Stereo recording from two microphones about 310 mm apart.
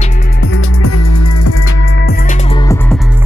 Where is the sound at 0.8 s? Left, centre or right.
Left.